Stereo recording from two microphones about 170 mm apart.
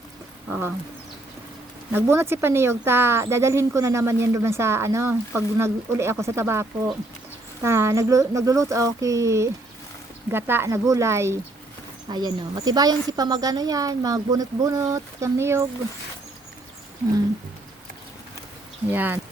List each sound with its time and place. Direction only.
0.4 s a sound: 10° right (ahead or behind)
1.9 s a woman's voice: 15° right (ahead or behind)
18.9 s speech: 10° right (ahead or behind)